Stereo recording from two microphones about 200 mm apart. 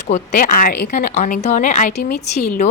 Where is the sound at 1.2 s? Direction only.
40° left (ahead or behind).